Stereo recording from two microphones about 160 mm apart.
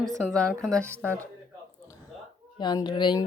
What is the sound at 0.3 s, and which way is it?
Speech, 5° left (ahead or behind).